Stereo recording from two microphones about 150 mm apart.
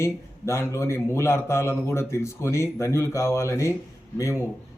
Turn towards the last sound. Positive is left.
turn(degrees=20)  # may be behind; listen again after turning